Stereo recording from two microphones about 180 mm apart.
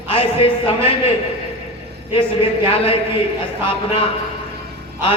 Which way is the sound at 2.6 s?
30° left (ahead or behind).